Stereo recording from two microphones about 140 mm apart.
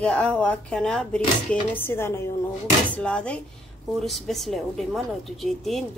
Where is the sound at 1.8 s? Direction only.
15° left (ahead or behind).